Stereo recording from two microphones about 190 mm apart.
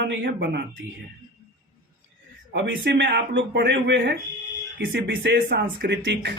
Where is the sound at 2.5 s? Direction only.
70° right (ahead or behind).